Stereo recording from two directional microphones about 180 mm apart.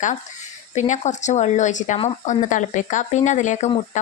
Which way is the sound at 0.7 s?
40° left (ahead or behind).